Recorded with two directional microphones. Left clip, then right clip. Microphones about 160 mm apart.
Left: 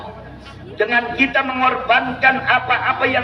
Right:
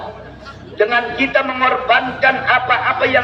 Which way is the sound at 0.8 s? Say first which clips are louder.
Right 1 dB; 20° left (ahead or behind).